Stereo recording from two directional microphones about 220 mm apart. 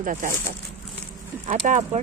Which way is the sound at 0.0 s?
35° right (ahead or behind).